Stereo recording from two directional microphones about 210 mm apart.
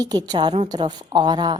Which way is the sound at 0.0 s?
20° right (ahead or behind).